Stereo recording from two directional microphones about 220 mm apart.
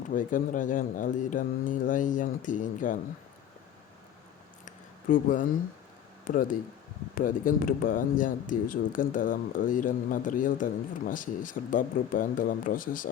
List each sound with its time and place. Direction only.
0.1 s speech: 35° left (ahead or behind)
4.6 s a sound: 35° left (ahead or behind)
6.2 s speech: 40° left (ahead or behind)